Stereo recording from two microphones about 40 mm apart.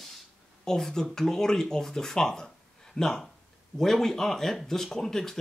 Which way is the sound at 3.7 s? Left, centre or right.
Centre.